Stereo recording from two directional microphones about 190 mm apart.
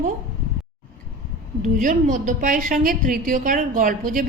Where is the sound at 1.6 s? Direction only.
45° right (ahead or behind).